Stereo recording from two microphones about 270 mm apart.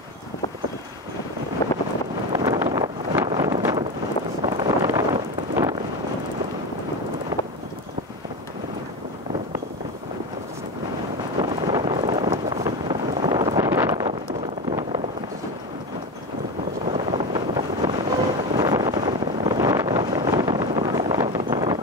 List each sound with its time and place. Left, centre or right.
1.6 s wind noise: centre
2.3 s wind noise: centre
3.3 s a sound: centre
4.6 s wind noise: centre
11.4 s vehicle: centre
14.7 s a sound: centre
16.9 s vehicle: centre
18.6 s wind noise: centre